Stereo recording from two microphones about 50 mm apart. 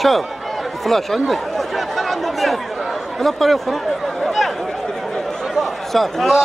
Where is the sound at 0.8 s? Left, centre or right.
Centre.